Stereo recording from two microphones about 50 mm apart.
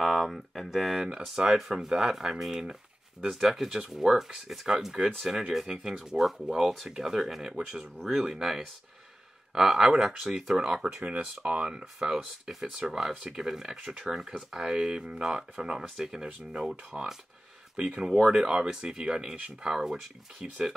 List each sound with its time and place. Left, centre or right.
0.0 s speech: centre